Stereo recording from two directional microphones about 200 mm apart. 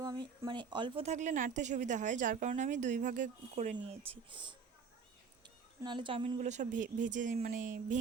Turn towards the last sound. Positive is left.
turn(degrees=-40)  # may be behind; listen again after turning